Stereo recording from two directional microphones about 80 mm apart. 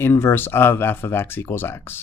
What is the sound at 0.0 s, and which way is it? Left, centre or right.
Speech, left.